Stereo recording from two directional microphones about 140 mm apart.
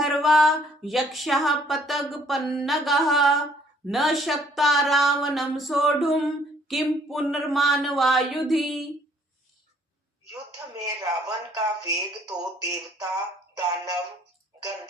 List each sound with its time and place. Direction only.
0.0 s speech: centre (ahead or behind)
10.8 s speech: 25° right (ahead or behind)